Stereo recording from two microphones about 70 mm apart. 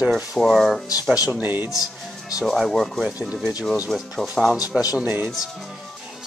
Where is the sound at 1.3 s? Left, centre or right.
Right.